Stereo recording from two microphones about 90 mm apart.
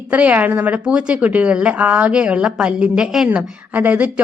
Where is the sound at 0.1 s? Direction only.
15° right (ahead or behind).